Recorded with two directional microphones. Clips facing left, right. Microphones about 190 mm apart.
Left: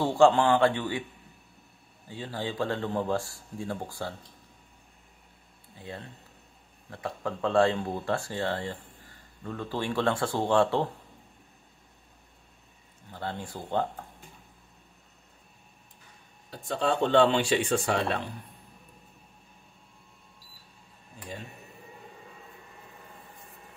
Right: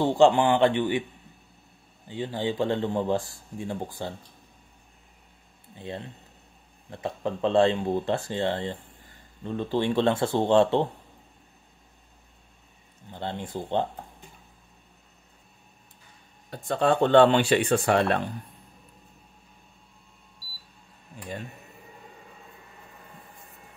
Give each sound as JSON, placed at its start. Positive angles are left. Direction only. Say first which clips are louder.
{"t": 0.0, "sound": "speech", "louder": "right 2 dB", "side_deg": -15}
{"t": 2.0, "sound": "speech", "louder": "right 5 dB", "side_deg": -20}
{"t": 5.8, "sound": "speech", "louder": "right 5 dB", "side_deg": -25}
{"t": 13.1, "sound": "speech", "louder": "right 3 dB", "side_deg": -25}
{"t": 16.4, "sound": "speech", "louder": "right 5 dB", "side_deg": -55}